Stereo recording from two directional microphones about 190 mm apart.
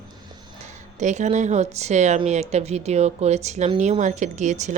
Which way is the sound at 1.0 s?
40° right (ahead or behind).